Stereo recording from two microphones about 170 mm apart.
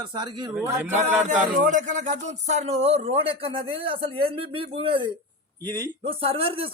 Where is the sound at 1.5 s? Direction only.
45° right (ahead or behind).